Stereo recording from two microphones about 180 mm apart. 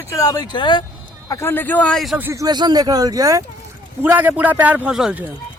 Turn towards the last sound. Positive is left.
turn(degrees=-5)  # may be behind; listen again after turning